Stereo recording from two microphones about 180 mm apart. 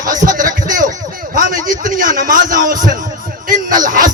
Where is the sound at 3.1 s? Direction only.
50° right (ahead or behind).